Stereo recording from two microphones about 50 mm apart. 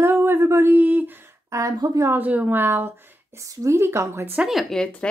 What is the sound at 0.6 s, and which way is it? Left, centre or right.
Speech, right.